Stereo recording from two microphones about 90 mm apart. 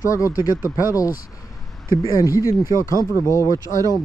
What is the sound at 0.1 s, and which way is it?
Speech, 40° left (ahead or behind).